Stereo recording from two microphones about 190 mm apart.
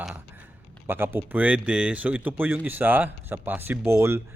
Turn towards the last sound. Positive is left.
turn(degrees=-15)  # may be behind; listen again after turning